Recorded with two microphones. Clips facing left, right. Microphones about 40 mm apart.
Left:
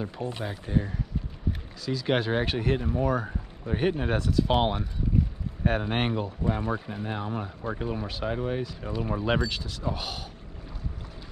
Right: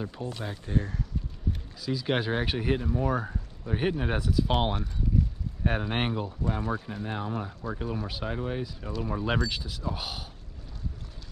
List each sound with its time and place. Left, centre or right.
0.2 s speech: left
0.5 s speech: centre
2.8 s speech: centre
3.1 s speech: centre
5.2 s boat: centre
5.7 s speech: centre